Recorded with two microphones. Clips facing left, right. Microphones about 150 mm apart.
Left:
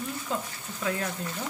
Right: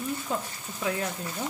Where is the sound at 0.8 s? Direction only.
15° right (ahead or behind).